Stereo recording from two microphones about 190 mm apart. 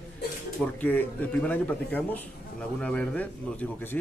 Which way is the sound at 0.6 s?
10° left (ahead or behind).